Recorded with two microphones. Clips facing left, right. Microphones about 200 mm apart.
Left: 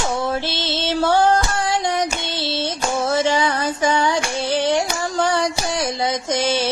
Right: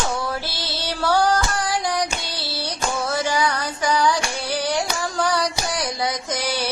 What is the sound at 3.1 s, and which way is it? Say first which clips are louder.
Child singing: left 4 dB; 25° left (ahead or behind).